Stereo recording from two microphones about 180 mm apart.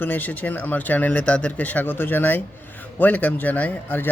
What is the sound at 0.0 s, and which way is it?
Speech, 10° left (ahead or behind).